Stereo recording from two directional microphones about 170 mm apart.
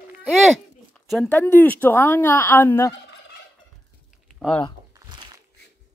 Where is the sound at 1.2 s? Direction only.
10° left (ahead or behind).